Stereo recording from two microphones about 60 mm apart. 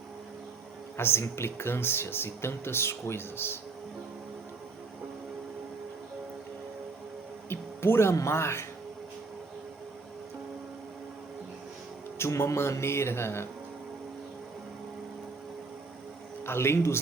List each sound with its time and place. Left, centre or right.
0.9 s speech: left
7.5 s music: left
8.1 s speech: left
12.2 s speech: left
16.5 s speech: left